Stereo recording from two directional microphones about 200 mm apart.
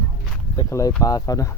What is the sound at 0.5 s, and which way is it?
Speech, 15° left (ahead or behind).